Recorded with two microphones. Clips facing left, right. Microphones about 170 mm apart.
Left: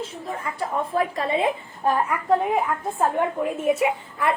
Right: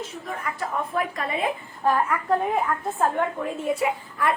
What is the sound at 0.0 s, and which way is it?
A woman's voice, 30° left (ahead or behind).